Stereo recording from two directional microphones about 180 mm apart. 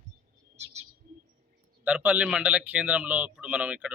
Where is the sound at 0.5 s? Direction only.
35° right (ahead or behind).